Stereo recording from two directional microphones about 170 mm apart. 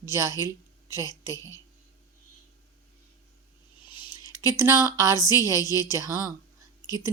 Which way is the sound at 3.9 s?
25° left (ahead or behind).